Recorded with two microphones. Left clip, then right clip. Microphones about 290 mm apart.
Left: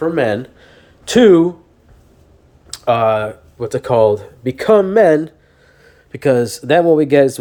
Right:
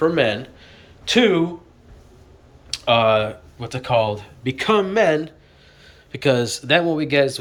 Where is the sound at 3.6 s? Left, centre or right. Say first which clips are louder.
Left 7 dB; left.